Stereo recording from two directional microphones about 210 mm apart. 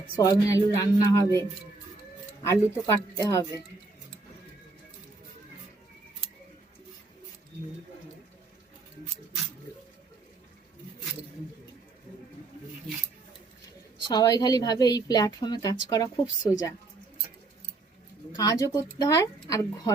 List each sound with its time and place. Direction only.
0.2 s a woman's voice: 15° left (ahead or behind)
14.1 s a woman's voice: 20° left (ahead or behind)
18.3 s a woman's voice: 15° left (ahead or behind)